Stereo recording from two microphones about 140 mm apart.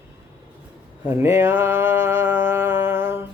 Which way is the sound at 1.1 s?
15° right (ahead or behind).